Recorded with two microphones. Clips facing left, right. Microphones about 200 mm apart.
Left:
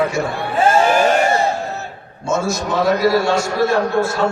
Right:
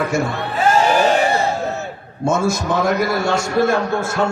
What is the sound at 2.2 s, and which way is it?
A man's voice, 55° right (ahead or behind).